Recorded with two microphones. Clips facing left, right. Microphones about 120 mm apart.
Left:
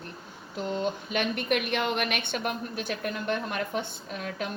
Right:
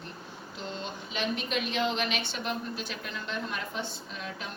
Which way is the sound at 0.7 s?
55° left (ahead or behind).